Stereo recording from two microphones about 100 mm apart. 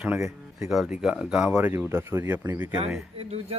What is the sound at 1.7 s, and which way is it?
Speech, 25° right (ahead or behind).